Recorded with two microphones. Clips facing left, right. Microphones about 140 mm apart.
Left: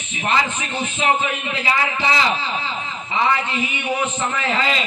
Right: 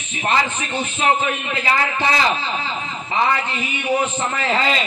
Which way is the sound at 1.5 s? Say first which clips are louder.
Right 1 dB; 50° right (ahead or behind).